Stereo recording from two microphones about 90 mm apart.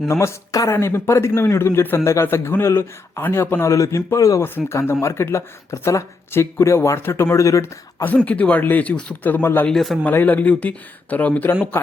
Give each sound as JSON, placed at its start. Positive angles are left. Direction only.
{"t": 0.1, "sound": "speech", "side_deg": 30}
{"t": 4.4, "sound": "speech", "side_deg": 25}
{"t": 8.0, "sound": "speech", "side_deg": 15}
{"t": 9.6, "sound": "a man's voice", "side_deg": 0}
{"t": 10.0, "sound": "speech", "side_deg": 20}